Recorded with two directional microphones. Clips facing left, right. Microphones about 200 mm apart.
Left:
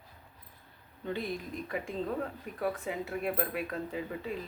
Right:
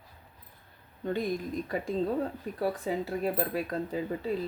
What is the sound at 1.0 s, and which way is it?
Speech, 45° right (ahead or behind).